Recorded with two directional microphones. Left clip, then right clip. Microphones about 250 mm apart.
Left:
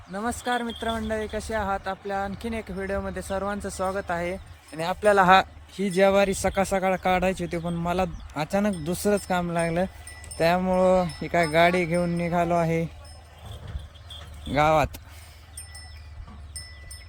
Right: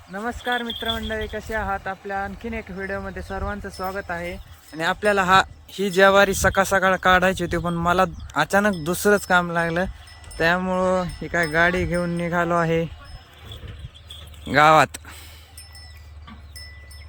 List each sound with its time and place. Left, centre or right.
0.1 s speech: centre
4.7 s speech: left
5.7 s speech: centre
14.5 s speech: centre